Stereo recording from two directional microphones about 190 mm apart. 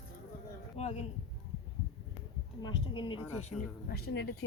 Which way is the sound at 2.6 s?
25° left (ahead or behind).